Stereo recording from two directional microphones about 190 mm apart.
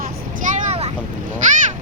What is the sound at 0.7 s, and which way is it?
Vehicle, 35° right (ahead or behind).